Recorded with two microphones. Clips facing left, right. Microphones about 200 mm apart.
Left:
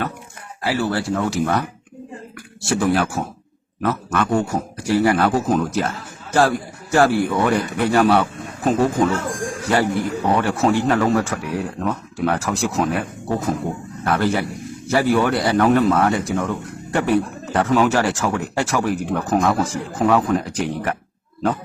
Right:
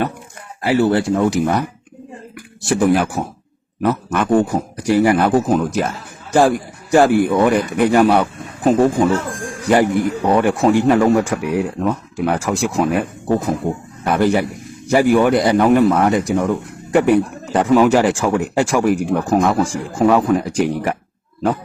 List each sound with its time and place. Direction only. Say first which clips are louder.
0.6 s a man's voice: right 6 dB; 25° right (ahead or behind)